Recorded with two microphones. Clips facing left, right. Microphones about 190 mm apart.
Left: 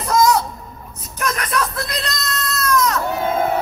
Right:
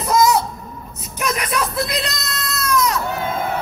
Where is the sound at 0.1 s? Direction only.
5° right (ahead or behind).